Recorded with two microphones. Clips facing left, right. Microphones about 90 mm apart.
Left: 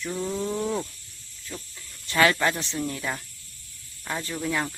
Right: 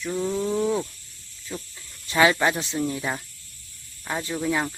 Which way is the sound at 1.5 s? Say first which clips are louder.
Right 4 dB; 15° right (ahead or behind).